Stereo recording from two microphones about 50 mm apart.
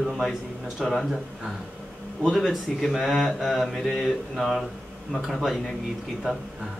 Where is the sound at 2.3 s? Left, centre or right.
Centre.